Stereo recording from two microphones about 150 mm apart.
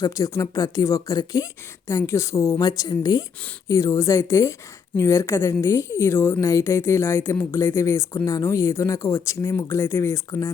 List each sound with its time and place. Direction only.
0.0 s a woman's voice: 20° left (ahead or behind)